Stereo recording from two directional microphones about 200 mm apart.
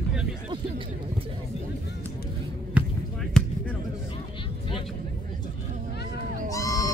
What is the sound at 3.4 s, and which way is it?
Basketball bounce, 5° left (ahead or behind).